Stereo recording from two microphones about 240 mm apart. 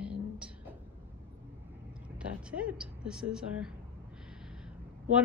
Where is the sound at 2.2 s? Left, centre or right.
Centre.